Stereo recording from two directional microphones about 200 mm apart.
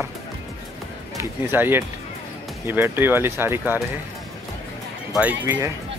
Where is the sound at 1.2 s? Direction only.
10° right (ahead or behind).